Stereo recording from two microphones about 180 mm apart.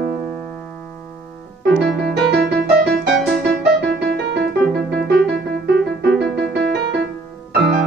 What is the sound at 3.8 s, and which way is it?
Music, 70° right (ahead or behind).